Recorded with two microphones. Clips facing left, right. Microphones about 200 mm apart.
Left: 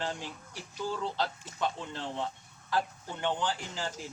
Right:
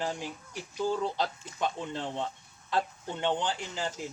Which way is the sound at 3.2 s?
20° right (ahead or behind).